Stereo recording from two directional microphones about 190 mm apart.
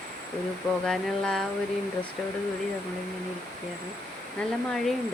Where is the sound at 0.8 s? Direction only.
Centre (ahead or behind).